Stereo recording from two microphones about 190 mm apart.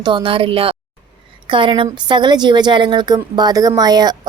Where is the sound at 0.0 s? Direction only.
25° right (ahead or behind).